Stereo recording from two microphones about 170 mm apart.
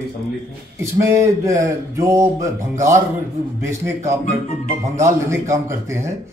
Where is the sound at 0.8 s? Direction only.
20° right (ahead or behind).